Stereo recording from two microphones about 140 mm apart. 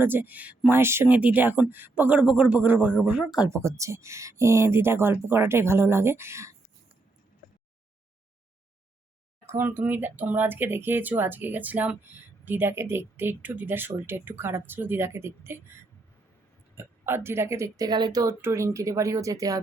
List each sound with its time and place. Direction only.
0.0 s speech: 15° right (ahead or behind)
3.5 s speech: 20° right (ahead or behind)
9.5 s speech: 15° right (ahead or behind)
16.7 s speech: 15° right (ahead or behind)